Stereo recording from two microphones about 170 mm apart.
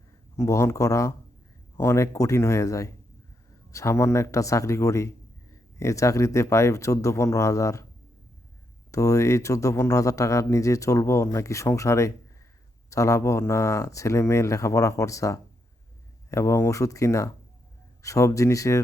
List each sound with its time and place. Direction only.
0.3 s speech: 15° left (ahead or behind)
8.9 s speech: 20° left (ahead or behind)